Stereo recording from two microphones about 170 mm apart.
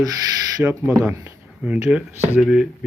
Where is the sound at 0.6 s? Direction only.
10° right (ahead or behind).